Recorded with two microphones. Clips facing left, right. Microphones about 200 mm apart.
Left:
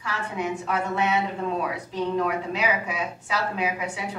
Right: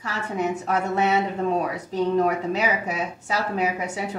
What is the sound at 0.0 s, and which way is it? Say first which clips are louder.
A woman's voice: right 3 dB; 40° right (ahead or behind).